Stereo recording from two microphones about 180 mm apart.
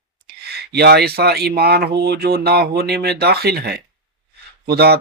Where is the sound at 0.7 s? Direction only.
65° right (ahead or behind).